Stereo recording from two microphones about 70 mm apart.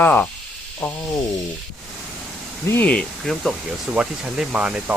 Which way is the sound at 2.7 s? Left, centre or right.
Centre.